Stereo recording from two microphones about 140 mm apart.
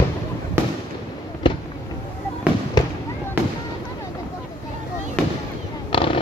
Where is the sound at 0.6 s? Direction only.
20° right (ahead or behind).